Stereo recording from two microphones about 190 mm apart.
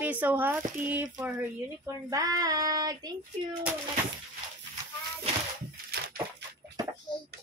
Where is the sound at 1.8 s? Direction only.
15° right (ahead or behind).